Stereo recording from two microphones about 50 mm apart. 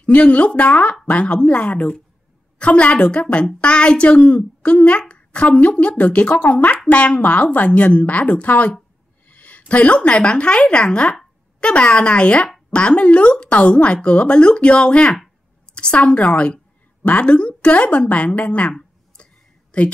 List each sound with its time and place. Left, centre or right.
0.0 s a woman's voice: left
4.3 s a woman's voice: left
9.3 s a sound: left
10.1 s a woman's voice: centre
19.2 s a sound: left
19.7 s a woman's voice: left